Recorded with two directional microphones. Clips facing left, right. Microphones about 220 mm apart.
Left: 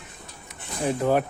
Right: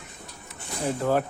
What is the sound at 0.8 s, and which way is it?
Speech, 15° left (ahead or behind).